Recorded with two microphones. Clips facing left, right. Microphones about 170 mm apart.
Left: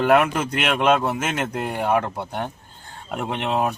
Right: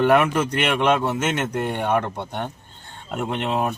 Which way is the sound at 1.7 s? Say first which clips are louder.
Left 3 dB; 5° left (ahead or behind).